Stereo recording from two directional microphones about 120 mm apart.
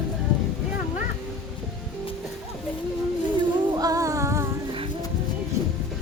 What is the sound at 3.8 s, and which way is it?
Music, 30° right (ahead or behind).